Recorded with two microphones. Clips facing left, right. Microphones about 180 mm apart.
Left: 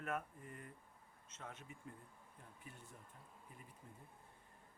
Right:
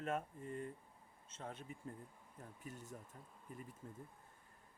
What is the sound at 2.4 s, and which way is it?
Speech, 45° right (ahead or behind).